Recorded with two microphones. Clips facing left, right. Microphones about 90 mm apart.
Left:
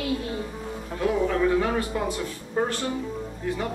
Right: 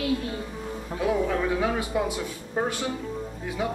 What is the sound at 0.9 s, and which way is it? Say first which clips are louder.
Speech: left 1 dB; 10° right (ahead or behind).